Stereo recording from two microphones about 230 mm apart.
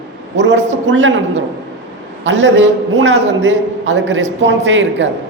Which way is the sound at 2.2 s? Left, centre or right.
Right.